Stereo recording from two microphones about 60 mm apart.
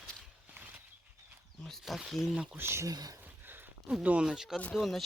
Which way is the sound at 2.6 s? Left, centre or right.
Right.